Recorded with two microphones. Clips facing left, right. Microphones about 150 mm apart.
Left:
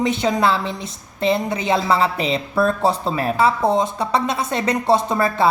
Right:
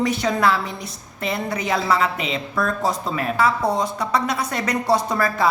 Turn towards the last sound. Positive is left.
turn(degrees=25)  # may be behind; listen again after turning